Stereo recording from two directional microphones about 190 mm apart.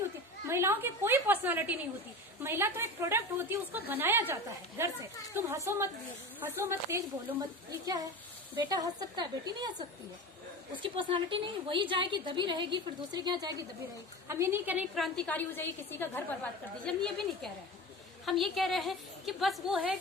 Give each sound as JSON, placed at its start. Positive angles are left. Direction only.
{"t": 0.4, "sound": "a woman's voice", "side_deg": -15}
{"t": 8.5, "sound": "a woman's voice", "side_deg": -20}